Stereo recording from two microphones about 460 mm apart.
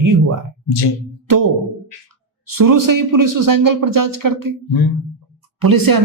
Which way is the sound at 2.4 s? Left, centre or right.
Right.